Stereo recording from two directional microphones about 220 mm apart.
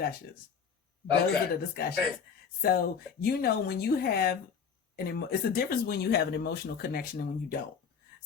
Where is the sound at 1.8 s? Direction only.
40° left (ahead or behind).